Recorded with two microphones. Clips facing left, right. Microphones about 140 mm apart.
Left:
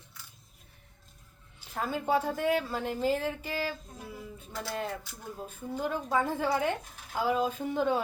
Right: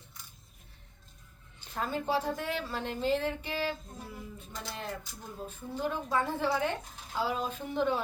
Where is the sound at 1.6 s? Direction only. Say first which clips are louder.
Left 1 dB; 5° left (ahead or behind).